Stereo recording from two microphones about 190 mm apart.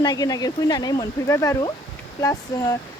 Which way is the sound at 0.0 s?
20° left (ahead or behind).